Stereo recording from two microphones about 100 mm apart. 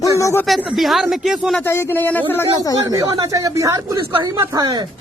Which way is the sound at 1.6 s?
25° left (ahead or behind).